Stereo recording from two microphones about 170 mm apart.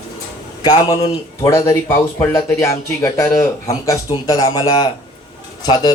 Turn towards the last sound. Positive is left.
turn(degrees=25)  # may be behind; listen again after turning